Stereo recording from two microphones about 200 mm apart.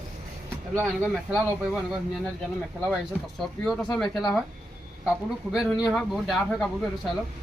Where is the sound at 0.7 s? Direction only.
10° right (ahead or behind).